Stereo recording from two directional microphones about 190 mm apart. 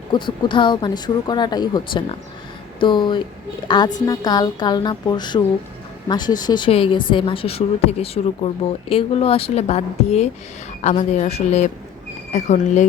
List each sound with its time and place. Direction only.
0.1 s a woman's voice: 25° left (ahead or behind); by 12.9 s 40° left (ahead or behind)